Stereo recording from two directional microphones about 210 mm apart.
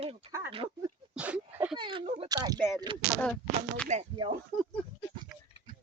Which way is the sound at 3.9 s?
35° right (ahead or behind).